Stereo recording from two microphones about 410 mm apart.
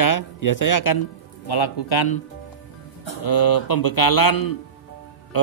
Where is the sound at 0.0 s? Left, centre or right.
Left.